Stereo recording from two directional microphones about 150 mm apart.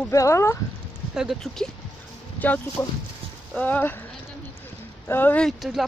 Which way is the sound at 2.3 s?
10° left (ahead or behind).